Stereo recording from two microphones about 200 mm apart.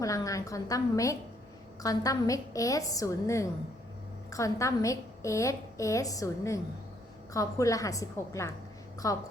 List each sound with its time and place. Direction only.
0.0 s a woman's voice: 15° left (ahead or behind)